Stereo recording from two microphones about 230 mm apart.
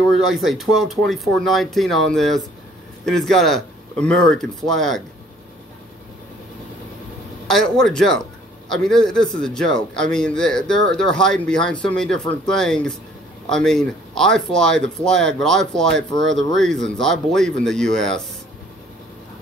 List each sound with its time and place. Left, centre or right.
0.3 s speech: centre
7.4 s speech: centre
16.2 s speech: right
16.5 s speech: centre